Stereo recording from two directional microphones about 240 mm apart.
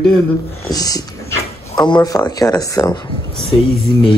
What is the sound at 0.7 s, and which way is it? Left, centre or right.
Speech, centre.